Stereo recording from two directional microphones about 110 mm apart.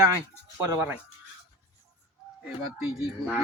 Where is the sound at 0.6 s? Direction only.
25° right (ahead or behind).